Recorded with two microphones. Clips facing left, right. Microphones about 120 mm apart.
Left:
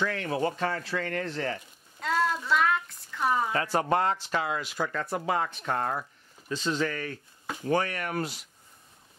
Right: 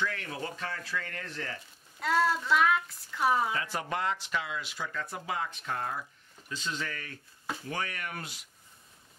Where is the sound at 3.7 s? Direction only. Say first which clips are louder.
Left 7 dB; 40° left (ahead or behind); by 6.0 s 60° left (ahead or behind).